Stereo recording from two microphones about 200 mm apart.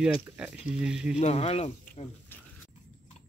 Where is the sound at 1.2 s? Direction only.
30° left (ahead or behind).